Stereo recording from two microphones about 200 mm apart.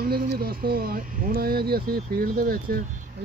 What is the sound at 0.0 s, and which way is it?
Speech, 45° right (ahead or behind).